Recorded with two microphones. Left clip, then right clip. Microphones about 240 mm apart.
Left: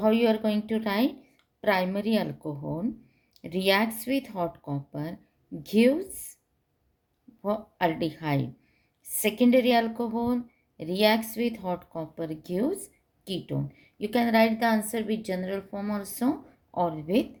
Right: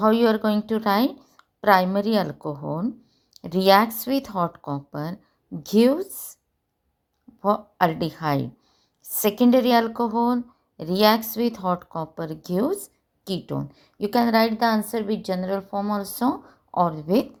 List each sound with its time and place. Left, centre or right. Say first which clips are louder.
0.0 s speech: right 4 dB; right
7.4 s speech: right 6 dB; right